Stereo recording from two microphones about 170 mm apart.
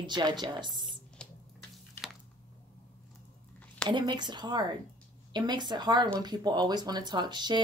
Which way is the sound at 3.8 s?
25° right (ahead or behind).